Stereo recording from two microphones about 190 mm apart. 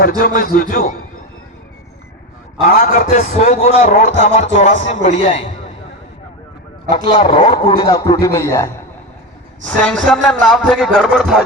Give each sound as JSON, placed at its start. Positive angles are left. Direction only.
{"t": 0.0, "sound": "speech", "side_deg": 50}
{"t": 2.6, "sound": "a man's voice", "side_deg": 45}
{"t": 6.9, "sound": "a man's voice", "side_deg": 25}